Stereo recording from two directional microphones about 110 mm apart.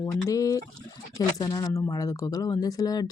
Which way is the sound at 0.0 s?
30° left (ahead or behind).